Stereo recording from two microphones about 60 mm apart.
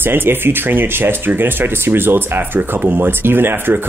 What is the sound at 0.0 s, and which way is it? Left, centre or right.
Speech, right.